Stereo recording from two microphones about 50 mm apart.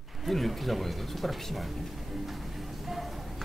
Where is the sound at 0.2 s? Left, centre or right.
Centre.